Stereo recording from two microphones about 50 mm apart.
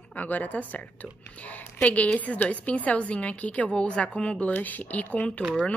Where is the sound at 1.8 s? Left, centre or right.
Left.